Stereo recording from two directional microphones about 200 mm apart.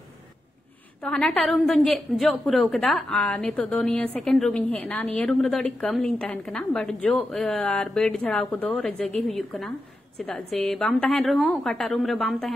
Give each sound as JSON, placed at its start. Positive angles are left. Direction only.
{"t": 1.0, "sound": "a woman's voice", "side_deg": 5}